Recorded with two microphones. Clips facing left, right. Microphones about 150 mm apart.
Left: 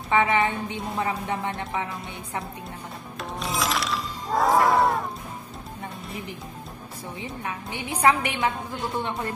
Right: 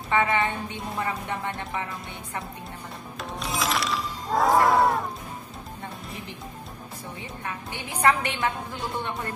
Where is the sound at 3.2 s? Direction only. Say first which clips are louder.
Left 1 dB; centre (ahead or behind).